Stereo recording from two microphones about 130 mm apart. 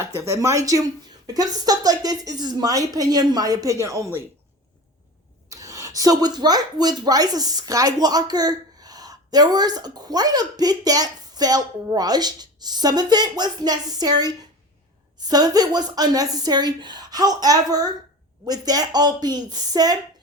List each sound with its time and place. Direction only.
0.2 s speech: 25° right (ahead or behind)
5.5 s speech: 25° right (ahead or behind)